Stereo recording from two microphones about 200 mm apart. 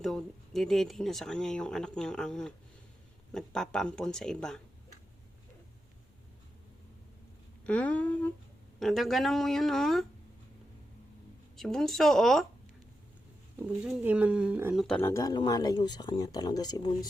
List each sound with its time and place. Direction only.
0.0 s speech: centre (ahead or behind)
7.6 s speech: 5° left (ahead or behind)
11.5 s speech: centre (ahead or behind)
13.7 s speech: 5° right (ahead or behind)
14.8 s speech: 10° left (ahead or behind)